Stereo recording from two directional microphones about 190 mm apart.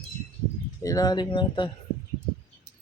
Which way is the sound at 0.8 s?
20° left (ahead or behind).